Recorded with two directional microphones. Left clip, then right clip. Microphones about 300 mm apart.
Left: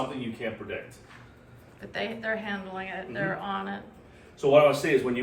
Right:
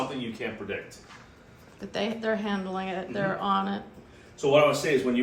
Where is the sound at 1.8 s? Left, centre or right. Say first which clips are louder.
Right 2 dB; centre.